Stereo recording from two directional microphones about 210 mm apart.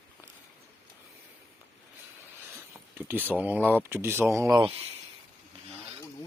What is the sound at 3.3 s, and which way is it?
Speech, 10° right (ahead or behind).